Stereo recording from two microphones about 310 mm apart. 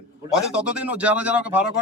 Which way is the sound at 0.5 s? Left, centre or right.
Centre.